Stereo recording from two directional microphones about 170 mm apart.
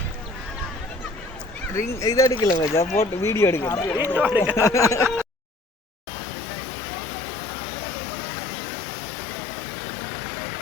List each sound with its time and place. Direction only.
1.7 s speech: 20° left (ahead or behind)
3.9 s speech: 10° right (ahead or behind)
4.5 s speech: 15° left (ahead or behind)